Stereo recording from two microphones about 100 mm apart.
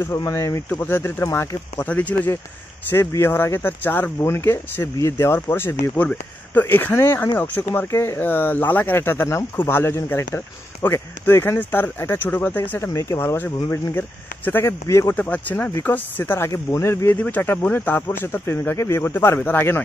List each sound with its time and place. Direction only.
0.0 s speech: 30° left (ahead or behind)
0.7 s speech: 20° left (ahead or behind)
15.1 s speech: 15° left (ahead or behind)
16.4 s speech: 30° left (ahead or behind)